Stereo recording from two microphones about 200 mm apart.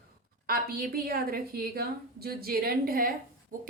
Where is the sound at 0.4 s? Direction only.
45° right (ahead or behind).